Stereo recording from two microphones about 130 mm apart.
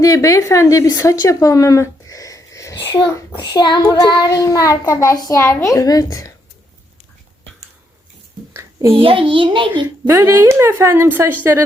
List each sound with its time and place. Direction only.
0.0 s speech: 25° left (ahead or behind)
8.5 s a sound: 20° right (ahead or behind)
9.0 s a child's voice: 45° right (ahead or behind)
10.1 s speech: 25° right (ahead or behind)